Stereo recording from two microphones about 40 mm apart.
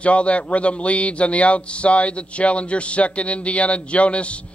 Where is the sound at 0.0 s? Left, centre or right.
Left.